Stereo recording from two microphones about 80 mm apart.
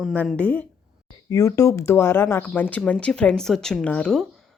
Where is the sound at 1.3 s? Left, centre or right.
Left.